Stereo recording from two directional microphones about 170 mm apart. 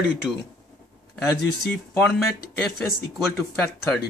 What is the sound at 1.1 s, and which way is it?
Speech, centre (ahead or behind).